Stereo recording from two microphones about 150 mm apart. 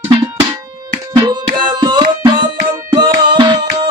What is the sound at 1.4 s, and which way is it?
Music, 30° right (ahead or behind).